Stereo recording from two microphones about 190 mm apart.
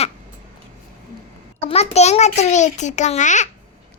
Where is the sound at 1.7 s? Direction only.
35° left (ahead or behind).